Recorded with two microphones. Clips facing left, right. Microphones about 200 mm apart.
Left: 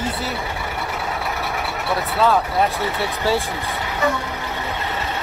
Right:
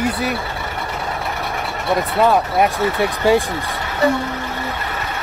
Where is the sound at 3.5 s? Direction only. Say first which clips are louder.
Right 1 dB; 10° left (ahead or behind).